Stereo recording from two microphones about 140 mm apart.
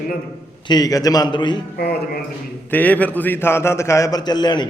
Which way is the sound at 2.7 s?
10° left (ahead or behind).